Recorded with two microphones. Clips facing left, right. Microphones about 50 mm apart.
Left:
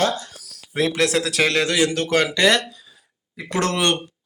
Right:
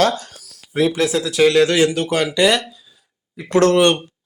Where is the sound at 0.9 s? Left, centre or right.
Left.